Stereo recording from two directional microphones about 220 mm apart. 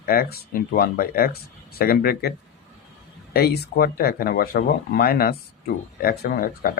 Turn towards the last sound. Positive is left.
turn(degrees=40)  # may be behind; listen again after turning